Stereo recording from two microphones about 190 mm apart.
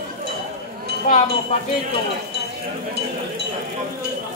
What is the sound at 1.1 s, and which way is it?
Wind chime, 40° left (ahead or behind).